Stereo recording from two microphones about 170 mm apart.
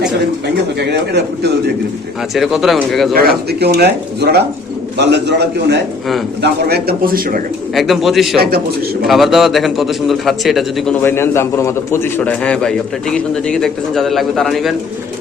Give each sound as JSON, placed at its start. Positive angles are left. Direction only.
{"t": 0.8, "sound": "speech", "side_deg": -80}
{"t": 2.3, "sound": "a man's voice", "side_deg": 0}
{"t": 3.2, "sound": "speech", "side_deg": -70}
{"t": 4.9, "sound": "a man's voice", "side_deg": -85}
{"t": 6.4, "sound": "speech", "side_deg": -70}
{"t": 7.8, "sound": "a man's voice", "side_deg": 0}
{"t": 8.4, "sound": "speech", "side_deg": -65}
{"t": 9.0, "sound": "a man's voice", "side_deg": 0}
{"t": 11.0, "sound": "a man's voice", "side_deg": 15}